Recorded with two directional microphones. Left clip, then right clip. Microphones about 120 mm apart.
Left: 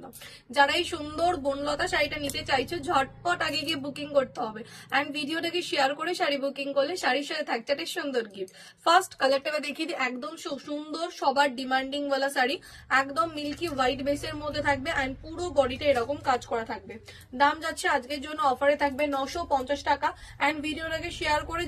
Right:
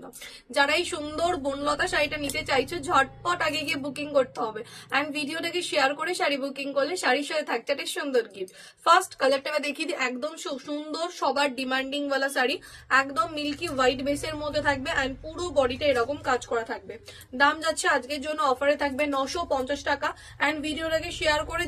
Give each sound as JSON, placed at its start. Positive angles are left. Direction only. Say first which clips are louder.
{"t": 0.6, "sound": "a woman's voice", "louder": "even", "side_deg": -30}